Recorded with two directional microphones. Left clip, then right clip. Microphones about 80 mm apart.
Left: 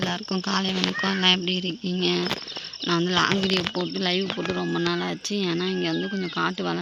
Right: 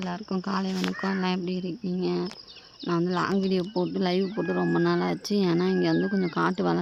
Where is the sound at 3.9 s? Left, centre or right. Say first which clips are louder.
Left 2 dB; right.